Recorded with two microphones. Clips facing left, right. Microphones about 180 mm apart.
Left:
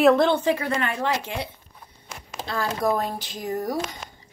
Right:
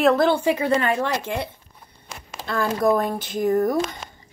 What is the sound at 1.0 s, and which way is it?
Speech, 55° right (ahead or behind).